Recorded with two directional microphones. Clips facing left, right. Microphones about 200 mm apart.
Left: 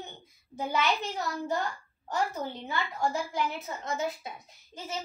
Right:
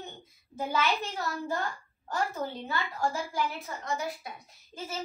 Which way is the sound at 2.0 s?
20° left (ahead or behind).